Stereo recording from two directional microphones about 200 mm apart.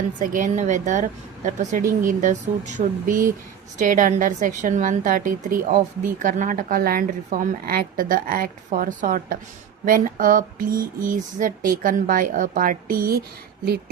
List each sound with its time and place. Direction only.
0.2 s a woman's voice: 40° right (ahead or behind)